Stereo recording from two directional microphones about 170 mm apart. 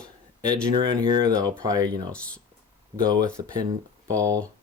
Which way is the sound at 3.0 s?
25° right (ahead or behind).